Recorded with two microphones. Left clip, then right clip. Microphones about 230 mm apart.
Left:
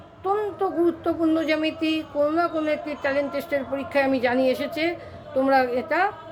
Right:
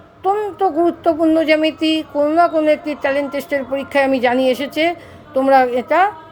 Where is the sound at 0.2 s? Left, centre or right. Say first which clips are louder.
Right 7 dB; right.